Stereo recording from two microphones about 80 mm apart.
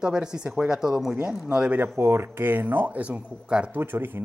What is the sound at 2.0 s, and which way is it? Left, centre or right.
Speech, right.